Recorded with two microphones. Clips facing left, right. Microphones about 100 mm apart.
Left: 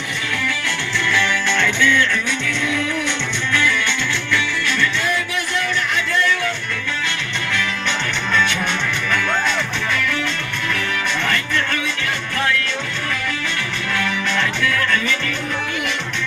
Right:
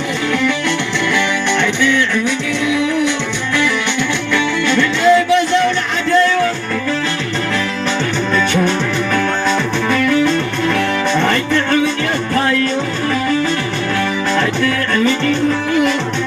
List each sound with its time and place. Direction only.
4.3 s music: 25° right (ahead or behind)
9.9 s music: 35° right (ahead or behind)
14.3 s music: 35° right (ahead or behind)